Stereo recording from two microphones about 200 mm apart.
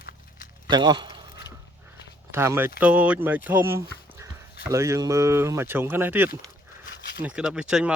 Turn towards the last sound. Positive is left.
turn(degrees=-5)  # may be behind; listen again after turning